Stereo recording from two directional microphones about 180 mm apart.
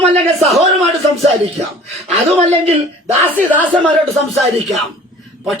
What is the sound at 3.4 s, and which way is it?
Speech, 10° left (ahead or behind).